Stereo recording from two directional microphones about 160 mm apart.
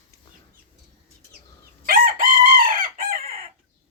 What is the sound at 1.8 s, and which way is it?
Chicken, 65° right (ahead or behind).